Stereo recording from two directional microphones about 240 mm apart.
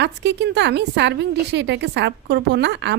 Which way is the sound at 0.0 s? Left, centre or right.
Right.